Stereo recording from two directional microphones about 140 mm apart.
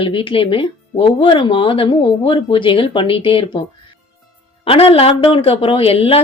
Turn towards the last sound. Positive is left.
turn(degrees=45)  # may be behind; listen again after turning